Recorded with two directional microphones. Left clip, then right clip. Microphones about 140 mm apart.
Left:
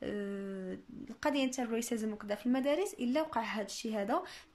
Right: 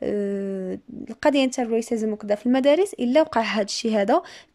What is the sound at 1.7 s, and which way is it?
Speech, 40° right (ahead or behind).